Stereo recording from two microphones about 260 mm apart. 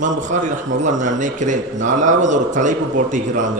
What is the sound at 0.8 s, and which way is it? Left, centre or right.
A man's voice, right.